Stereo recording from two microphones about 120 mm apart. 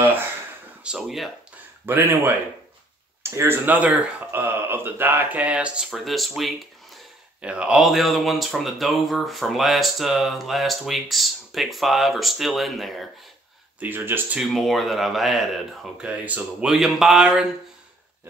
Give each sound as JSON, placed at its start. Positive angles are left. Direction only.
{"t": 0.0, "sound": "a sound", "side_deg": -15}
{"t": 0.8, "sound": "speech", "side_deg": -5}
{"t": 1.9, "sound": "speech", "side_deg": -15}
{"t": 13.7, "sound": "speech", "side_deg": -15}
{"t": 14.4, "sound": "speech", "side_deg": 0}